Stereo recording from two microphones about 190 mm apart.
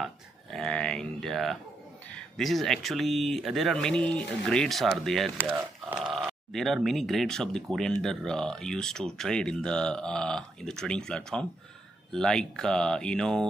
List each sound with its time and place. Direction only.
0.0 s speech: centre (ahead or behind)